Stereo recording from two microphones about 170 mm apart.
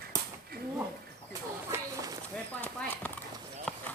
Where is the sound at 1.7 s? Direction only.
20° right (ahead or behind).